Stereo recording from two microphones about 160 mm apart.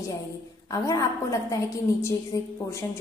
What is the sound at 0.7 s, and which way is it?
A woman's voice, 20° left (ahead or behind).